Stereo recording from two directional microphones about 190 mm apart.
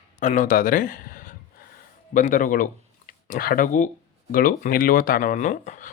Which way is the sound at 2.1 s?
45° left (ahead or behind).